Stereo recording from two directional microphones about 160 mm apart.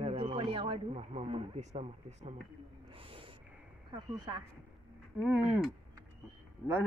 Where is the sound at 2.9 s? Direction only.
35° right (ahead or behind).